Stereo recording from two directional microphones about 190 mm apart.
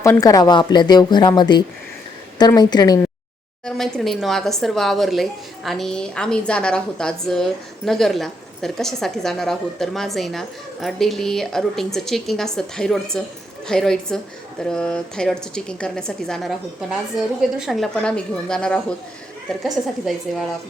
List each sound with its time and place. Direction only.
0.0 s speech: 15° left (ahead or behind)
3.7 s a woman's voice: centre (ahead or behind)